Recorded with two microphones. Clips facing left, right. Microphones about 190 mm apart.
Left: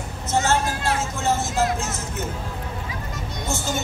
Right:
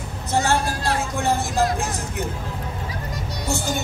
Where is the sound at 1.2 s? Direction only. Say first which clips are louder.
Right 1 dB; 15° right (ahead or behind).